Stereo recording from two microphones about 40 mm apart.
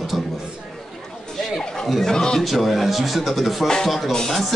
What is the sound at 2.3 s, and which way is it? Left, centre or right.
Speech, centre.